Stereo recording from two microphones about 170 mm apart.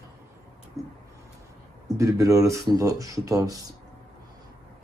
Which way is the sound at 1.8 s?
20° right (ahead or behind).